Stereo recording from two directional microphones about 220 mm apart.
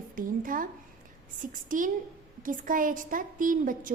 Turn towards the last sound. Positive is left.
turn(degrees=-40)  # may be behind; listen again after turning